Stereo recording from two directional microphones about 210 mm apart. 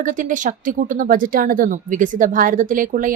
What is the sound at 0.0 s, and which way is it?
Speech, 40° right (ahead or behind).